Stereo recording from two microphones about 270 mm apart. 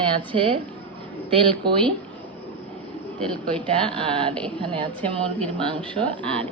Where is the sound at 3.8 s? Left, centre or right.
Centre.